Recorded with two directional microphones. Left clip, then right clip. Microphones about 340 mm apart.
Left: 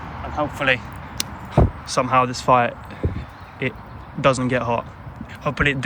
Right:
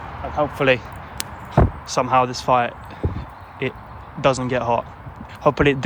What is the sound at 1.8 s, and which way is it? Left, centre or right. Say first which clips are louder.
Speech: even; centre.